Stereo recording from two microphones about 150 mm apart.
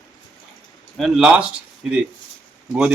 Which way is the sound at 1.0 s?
5° right (ahead or behind).